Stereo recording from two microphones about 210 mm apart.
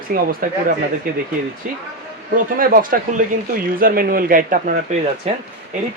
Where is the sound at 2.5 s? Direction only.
40° right (ahead or behind).